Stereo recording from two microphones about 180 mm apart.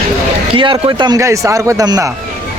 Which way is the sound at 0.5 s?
25° right (ahead or behind).